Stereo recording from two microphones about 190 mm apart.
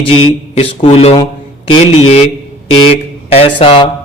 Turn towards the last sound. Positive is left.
turn(degrees=25)  # may be behind; listen again after turning